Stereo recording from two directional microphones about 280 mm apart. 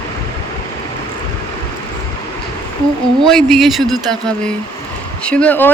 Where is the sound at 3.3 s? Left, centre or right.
Centre.